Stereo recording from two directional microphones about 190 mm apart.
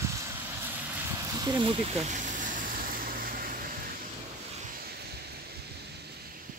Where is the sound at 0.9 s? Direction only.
10° right (ahead or behind); by 3.6 s 50° right (ahead or behind).